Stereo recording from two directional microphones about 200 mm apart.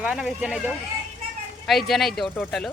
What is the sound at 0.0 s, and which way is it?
Speech, 5° right (ahead or behind).